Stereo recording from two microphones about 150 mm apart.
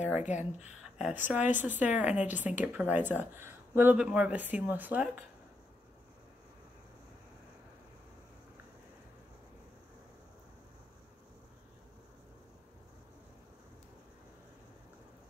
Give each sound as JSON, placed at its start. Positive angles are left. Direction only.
{"t": 0.3, "sound": "speech", "side_deg": 50}
{"t": 0.9, "sound": "speech", "side_deg": -10}